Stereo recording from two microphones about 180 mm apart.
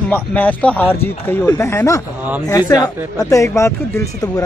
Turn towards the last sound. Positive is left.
turn(degrees=20)  # may be behind; listen again after turning